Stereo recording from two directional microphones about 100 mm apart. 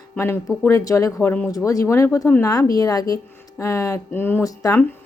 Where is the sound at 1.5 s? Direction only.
35° left (ahead or behind).